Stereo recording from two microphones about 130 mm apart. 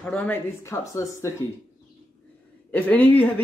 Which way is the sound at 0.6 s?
25° left (ahead or behind).